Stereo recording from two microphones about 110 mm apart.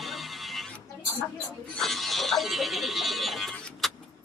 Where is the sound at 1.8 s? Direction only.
Centre (ahead or behind).